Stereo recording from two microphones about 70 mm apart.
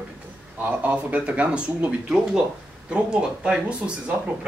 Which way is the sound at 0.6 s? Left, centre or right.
Right.